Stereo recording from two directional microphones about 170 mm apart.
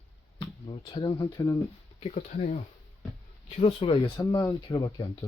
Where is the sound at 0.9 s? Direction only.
25° left (ahead or behind).